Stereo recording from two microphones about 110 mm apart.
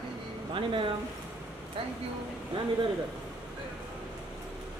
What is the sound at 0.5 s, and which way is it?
Speech, 50° right (ahead or behind).